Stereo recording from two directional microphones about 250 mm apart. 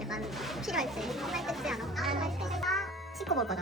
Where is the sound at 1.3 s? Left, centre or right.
Centre.